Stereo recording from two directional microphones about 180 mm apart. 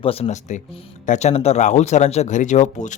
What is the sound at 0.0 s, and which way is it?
A man's voice, 35° left (ahead or behind).